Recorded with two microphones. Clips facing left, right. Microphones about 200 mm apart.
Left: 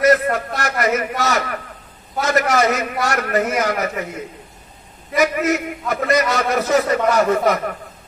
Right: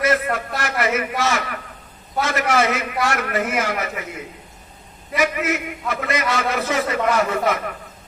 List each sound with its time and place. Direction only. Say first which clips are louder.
0.0 s a sound: left 5 dB; 40° left (ahead or behind)
0.6 s a man's voice: even; 40° left (ahead or behind)
5.1 s a man's voice: left 4 dB; 40° left (ahead or behind)